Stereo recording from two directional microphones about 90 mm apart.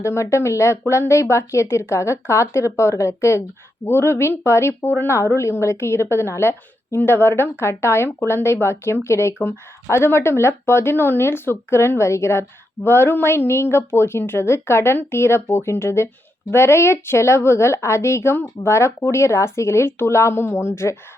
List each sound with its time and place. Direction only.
0.0 s a woman's voice: 30° left (ahead or behind)